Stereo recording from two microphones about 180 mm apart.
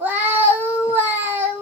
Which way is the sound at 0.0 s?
10° right (ahead or behind).